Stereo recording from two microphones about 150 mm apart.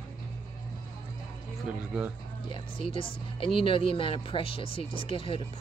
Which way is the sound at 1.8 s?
10° right (ahead or behind).